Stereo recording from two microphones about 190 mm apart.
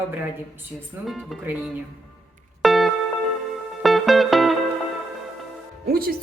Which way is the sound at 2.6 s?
Centre (ahead or behind).